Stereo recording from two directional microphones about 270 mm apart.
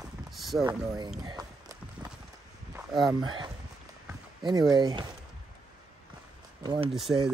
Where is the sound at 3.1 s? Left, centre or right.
Centre.